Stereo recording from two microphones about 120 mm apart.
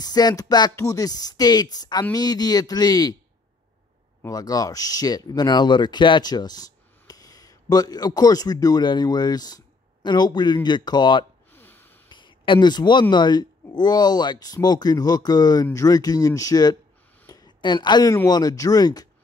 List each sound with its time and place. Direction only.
0.0 s speech: 35° left (ahead or behind)
4.2 s speech: 30° left (ahead or behind)
11.5 s snort: 15° left (ahead or behind)
12.1 s a sound: 40° left (ahead or behind)
13.1 s speech: 35° left (ahead or behind)
17.3 s a sound: 35° left (ahead or behind)
18.1 s speech: 30° left (ahead or behind)